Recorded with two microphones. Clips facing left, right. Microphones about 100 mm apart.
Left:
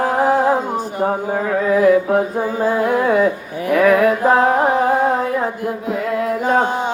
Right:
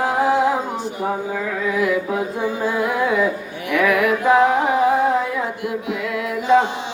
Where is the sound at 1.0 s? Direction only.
45° left (ahead or behind).